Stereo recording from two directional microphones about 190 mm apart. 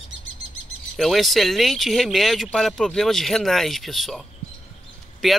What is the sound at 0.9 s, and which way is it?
Speech, centre (ahead or behind).